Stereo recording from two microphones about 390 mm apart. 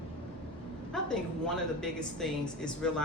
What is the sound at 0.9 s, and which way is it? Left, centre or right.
A woman's voice, centre.